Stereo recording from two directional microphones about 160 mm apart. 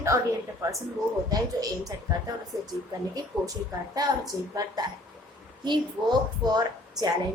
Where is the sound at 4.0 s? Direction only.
25° right (ahead or behind).